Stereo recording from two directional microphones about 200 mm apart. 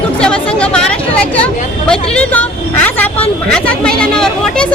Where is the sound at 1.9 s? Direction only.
5° left (ahead or behind).